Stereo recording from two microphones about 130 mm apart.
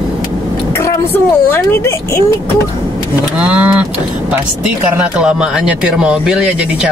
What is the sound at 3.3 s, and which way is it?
Speech, 10° right (ahead or behind).